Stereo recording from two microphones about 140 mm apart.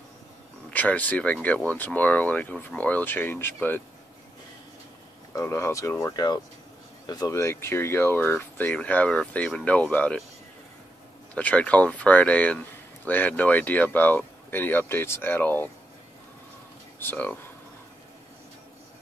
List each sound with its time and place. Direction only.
0.7 s speech: 10° left (ahead or behind)
5.3 s speech: 20° left (ahead or behind)
11.3 s speech: 10° left (ahead or behind)
17.0 s speech: 10° left (ahead or behind)